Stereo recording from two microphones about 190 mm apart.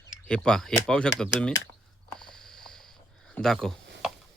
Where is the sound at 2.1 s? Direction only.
5° left (ahead or behind).